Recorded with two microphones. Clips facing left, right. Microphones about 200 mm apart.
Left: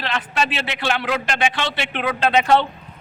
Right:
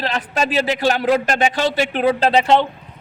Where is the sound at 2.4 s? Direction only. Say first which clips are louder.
Right 2 dB; 20° right (ahead or behind).